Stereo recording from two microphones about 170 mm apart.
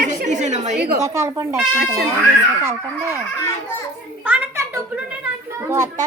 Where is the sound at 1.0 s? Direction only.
15° right (ahead or behind).